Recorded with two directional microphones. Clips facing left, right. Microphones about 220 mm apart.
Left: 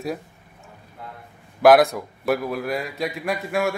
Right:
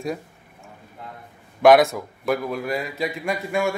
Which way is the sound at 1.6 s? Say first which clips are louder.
Even; centre (ahead or behind).